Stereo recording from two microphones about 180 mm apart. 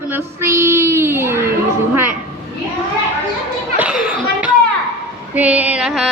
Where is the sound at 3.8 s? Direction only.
5° right (ahead or behind).